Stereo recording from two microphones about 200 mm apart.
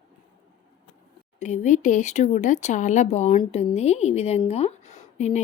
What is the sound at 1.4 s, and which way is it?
Speech, 35° left (ahead or behind).